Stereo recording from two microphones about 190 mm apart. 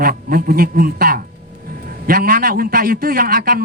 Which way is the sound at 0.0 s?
50° right (ahead or behind).